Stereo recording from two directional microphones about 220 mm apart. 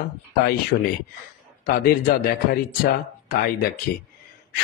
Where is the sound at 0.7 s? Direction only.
45° left (ahead or behind).